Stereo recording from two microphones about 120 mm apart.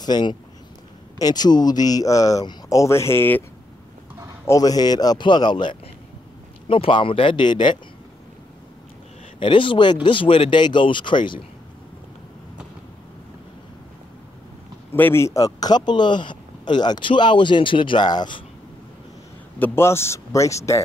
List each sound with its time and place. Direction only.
0.0 s a man's voice: 35° left (ahead or behind); by 3.4 s 15° left (ahead or behind)
4.5 s a man's voice: 30° left (ahead or behind)
9.4 s speech: 45° left (ahead or behind)
14.9 s a man's voice: 20° left (ahead or behind); by 18.4 s 35° left (ahead or behind)
19.6 s speech: 20° left (ahead or behind)